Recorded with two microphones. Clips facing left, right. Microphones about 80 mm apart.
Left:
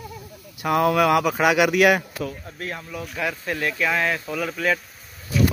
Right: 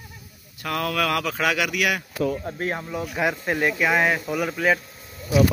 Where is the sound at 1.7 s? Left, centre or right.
Left.